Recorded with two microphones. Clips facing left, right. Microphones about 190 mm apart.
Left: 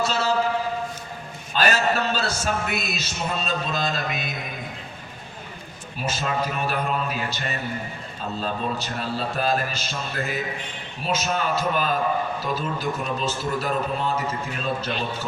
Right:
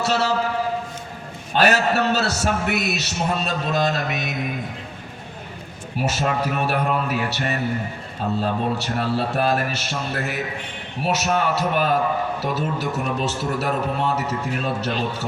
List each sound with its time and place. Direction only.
0.0 s a man's voice: 75° right (ahead or behind)
1.5 s a man's voice: 70° right (ahead or behind)
6.0 s a man's voice: 70° right (ahead or behind)